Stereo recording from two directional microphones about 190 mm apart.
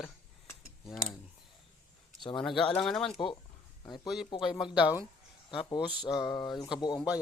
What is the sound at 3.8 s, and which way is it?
Speech, 20° left (ahead or behind).